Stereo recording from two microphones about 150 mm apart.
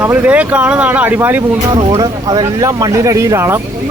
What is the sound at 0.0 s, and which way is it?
Speech, 10° right (ahead or behind).